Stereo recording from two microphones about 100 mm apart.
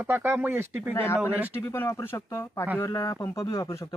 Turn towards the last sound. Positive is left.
turn(degrees=30)  # may be behind; listen again after turning